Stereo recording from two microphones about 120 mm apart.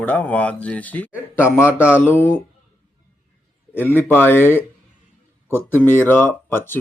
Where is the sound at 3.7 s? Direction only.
15° left (ahead or behind).